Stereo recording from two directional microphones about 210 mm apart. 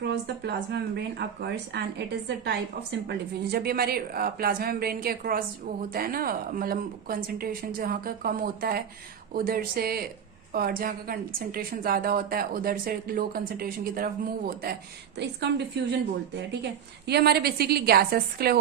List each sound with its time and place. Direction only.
0.0 s a woman's voice: 55° right (ahead or behind)
17.1 s a woman's voice: 50° right (ahead or behind)